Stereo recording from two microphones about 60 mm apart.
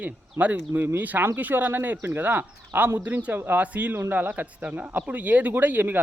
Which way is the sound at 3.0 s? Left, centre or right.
Right.